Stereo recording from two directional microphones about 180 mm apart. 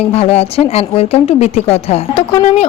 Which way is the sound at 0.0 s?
35° left (ahead or behind).